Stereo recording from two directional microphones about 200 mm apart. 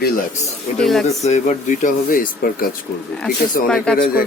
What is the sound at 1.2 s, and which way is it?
Speech, 35° left (ahead or behind).